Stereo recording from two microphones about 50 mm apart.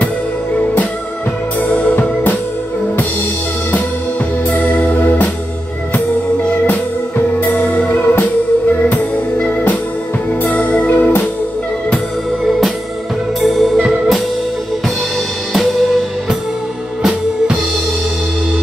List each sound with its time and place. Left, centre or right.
1.6 s music: left
4.5 s organ: left
7.3 s music: left
12.4 s music: centre
15.5 s music: centre